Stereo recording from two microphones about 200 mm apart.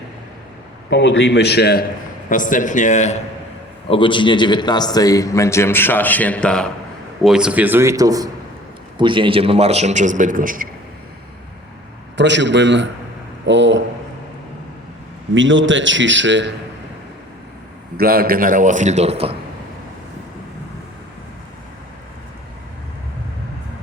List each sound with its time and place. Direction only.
0.9 s a man's voice: 65° left (ahead or behind)
2.3 s a man's voice: 40° left (ahead or behind)
3.8 s a man's voice: 25° left (ahead or behind); by 10.7 s 45° right (ahead or behind)
12.1 s a man's voice: 65° right (ahead or behind)
15.4 s a man's voice: 70° right (ahead or behind)
17.9 s a man's voice: 50° right (ahead or behind); by 19.4 s 30° right (ahead or behind)